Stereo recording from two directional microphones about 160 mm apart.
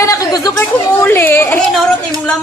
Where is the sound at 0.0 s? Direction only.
20° left (ahead or behind).